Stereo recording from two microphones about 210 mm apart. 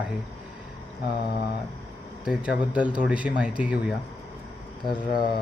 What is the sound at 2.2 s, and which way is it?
Speech, 5° right (ahead or behind).